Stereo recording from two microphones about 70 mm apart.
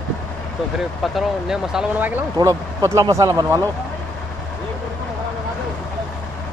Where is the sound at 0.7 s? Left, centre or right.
Centre.